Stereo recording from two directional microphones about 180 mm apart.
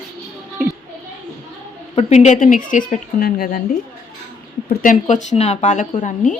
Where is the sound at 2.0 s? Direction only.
40° left (ahead or behind); by 3.6 s 55° left (ahead or behind).